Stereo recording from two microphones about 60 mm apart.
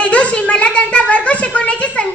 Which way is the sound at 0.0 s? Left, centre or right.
Left.